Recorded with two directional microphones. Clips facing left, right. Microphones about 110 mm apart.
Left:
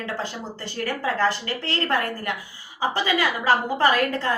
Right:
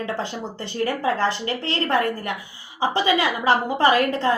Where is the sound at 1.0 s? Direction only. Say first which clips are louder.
Left 2 dB; 25° right (ahead or behind).